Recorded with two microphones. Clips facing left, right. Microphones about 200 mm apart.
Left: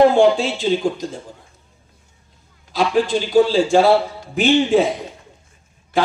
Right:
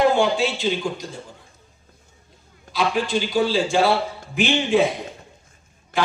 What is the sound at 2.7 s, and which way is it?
Speech, 45° left (ahead or behind).